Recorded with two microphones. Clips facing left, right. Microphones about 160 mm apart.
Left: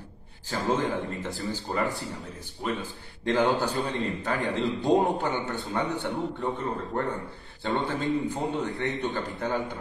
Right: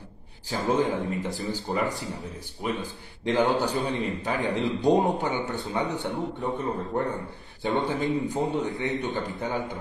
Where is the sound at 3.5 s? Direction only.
20° right (ahead or behind).